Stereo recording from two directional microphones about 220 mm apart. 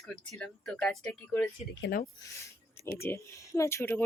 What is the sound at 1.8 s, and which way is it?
Speech, 40° left (ahead or behind).